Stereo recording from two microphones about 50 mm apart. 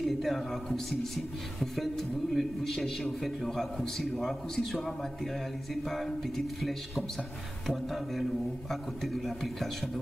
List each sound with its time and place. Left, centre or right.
0.0 s a man's voice: centre